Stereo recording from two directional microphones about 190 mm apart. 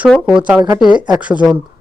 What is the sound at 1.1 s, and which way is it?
Speech, 5° right (ahead or behind).